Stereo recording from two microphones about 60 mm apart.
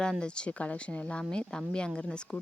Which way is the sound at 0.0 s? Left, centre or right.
Centre.